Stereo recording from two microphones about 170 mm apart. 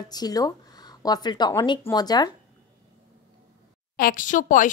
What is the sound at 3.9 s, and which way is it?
Speech, 55° left (ahead or behind).